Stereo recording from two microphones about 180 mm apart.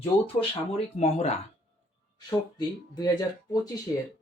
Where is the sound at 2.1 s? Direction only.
25° left (ahead or behind).